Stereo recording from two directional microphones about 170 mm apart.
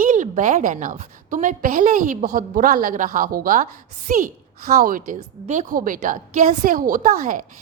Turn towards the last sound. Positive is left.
turn(degrees=-55)  # may be behind; listen again after turning